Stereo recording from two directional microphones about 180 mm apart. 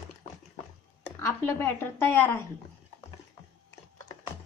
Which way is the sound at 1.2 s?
15° left (ahead or behind).